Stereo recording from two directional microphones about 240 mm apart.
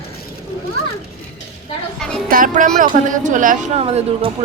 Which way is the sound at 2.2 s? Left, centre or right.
Right.